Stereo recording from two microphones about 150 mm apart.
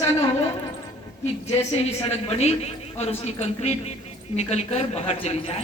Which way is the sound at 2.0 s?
45° left (ahead or behind).